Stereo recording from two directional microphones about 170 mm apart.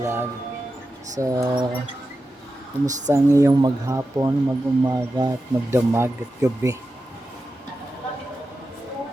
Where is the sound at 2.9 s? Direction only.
45° right (ahead or behind).